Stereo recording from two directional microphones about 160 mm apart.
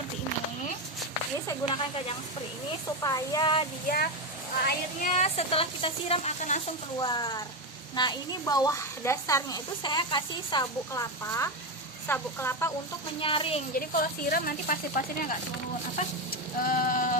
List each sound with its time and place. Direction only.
1.6 s speech: 40° left (ahead or behind)
3.0 s a woman's voice: 25° left (ahead or behind)
3.8 s speech: 70° left (ahead or behind)
5.0 s speech: 45° left (ahead or behind)
7.0 s a woman's voice: 25° left (ahead or behind)
13.1 s speech: 35° left (ahead or behind)
13.7 s speech: 65° left (ahead or behind)
16.6 s speech: 55° left (ahead or behind)